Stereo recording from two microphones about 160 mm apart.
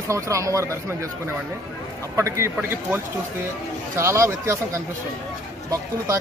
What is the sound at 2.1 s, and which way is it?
A man's voice, 20° right (ahead or behind).